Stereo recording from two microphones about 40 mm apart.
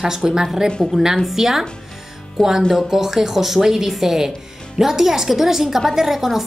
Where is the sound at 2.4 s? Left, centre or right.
Centre.